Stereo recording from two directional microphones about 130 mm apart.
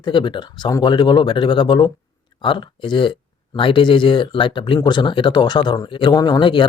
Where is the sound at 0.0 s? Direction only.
40° left (ahead or behind).